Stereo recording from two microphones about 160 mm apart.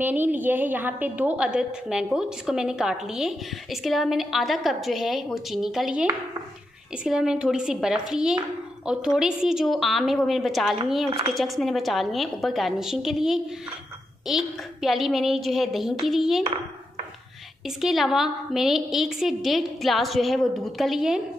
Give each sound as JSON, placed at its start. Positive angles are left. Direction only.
{"t": 0.0, "sound": "a woman's voice", "side_deg": -10}
{"t": 11.1, "sound": "a woman's voice", "side_deg": -25}
{"t": 11.3, "sound": "a woman's voice", "side_deg": 0}
{"t": 17.6, "sound": "a woman's voice", "side_deg": 0}